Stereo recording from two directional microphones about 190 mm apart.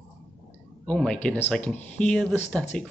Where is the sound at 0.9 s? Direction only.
5° left (ahead or behind).